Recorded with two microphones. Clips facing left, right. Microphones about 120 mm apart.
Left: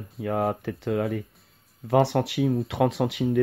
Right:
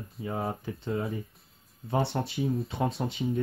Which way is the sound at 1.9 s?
85° left.